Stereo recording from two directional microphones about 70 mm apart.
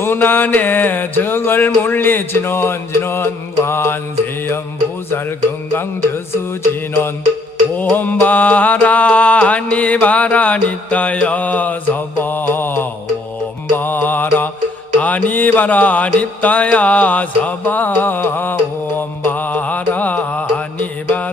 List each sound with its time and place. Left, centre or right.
0.0 s music: left
5.7 s music: left
7.8 s music: left